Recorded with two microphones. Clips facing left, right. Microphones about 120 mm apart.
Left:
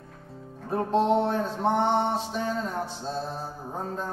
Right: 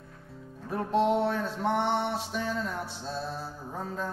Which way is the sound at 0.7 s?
35° left (ahead or behind).